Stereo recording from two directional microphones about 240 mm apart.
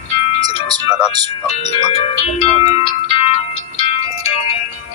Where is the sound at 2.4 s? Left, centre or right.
Left.